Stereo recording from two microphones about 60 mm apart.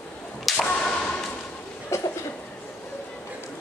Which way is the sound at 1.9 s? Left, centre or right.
Left.